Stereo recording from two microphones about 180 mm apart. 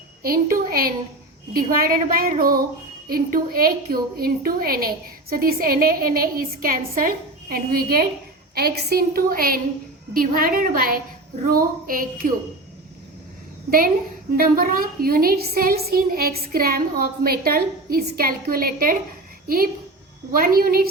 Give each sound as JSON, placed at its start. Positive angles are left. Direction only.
{"t": 0.2, "sound": "a woman's voice", "side_deg": -55}
{"t": 13.7, "sound": "a woman's voice", "side_deg": -55}